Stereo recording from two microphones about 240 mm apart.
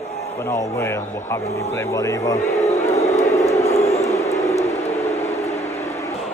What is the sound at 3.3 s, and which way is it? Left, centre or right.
Vehicle, centre.